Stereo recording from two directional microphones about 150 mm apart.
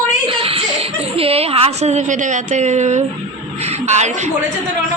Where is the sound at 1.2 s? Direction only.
40° right (ahead or behind).